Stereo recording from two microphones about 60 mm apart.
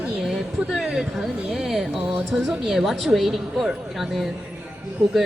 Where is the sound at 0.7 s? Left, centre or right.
Centre.